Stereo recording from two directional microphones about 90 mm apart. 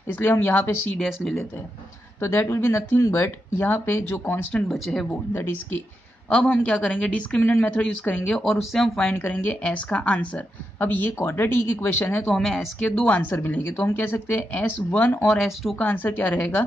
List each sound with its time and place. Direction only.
0.1 s a woman's voice: 25° left (ahead or behind)
0.9 s speech: centre (ahead or behind)
2.2 s a woman's voice: 30° left (ahead or behind)
4.6 s speech: centre (ahead or behind)
6.3 s a woman's voice: 15° left (ahead or behind)
8.7 s speech: 5° left (ahead or behind)
9.2 s a woman's voice: 20° left (ahead or behind)
15.2 s speech: centre (ahead or behind)
15.8 s a woman's voice: 20° left (ahead or behind)